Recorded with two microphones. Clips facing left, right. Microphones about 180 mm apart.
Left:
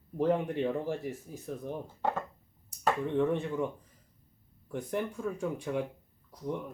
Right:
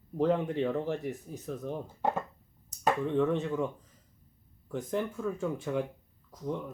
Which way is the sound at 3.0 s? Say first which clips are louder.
Even; 15° left (ahead or behind).